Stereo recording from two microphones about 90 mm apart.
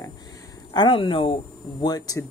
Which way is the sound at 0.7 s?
70° left (ahead or behind).